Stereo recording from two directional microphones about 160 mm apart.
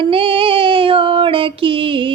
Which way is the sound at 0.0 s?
35° right (ahead or behind).